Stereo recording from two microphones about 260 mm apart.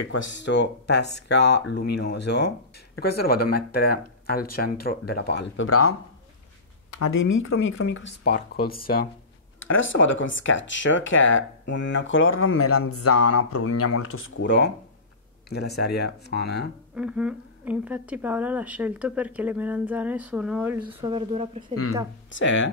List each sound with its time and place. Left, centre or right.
0.1 s speech: left
5.7 s speech: left
9.6 s speech: left
16.9 s a woman's voice: centre
20.9 s speech: centre
22.3 s speech: left